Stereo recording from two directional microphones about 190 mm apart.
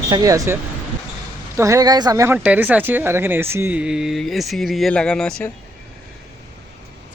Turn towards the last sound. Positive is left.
turn(degrees=5)  # may be behind; listen again after turning